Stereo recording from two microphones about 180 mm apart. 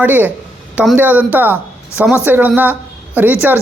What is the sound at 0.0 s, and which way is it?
Speech, 10° right (ahead or behind).